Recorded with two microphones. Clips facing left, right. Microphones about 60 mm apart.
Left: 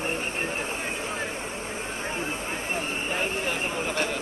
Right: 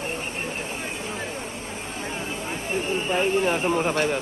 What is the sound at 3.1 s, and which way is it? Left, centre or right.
Speech, right.